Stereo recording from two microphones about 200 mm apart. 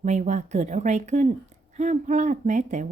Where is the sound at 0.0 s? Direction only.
35° right (ahead or behind).